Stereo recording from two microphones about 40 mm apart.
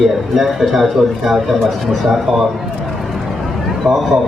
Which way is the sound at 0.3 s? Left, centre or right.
Centre.